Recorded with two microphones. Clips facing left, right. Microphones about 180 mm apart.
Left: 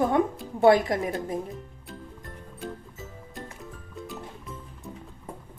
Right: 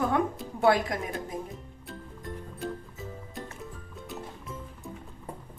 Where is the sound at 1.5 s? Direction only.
Centre (ahead or behind).